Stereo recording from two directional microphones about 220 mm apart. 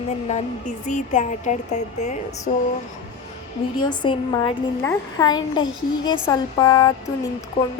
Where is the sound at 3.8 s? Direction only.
20° left (ahead or behind).